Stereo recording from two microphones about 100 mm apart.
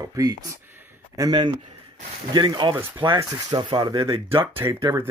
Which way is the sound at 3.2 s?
35° right (ahead or behind).